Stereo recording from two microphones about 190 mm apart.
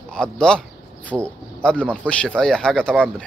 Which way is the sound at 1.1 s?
10° right (ahead or behind).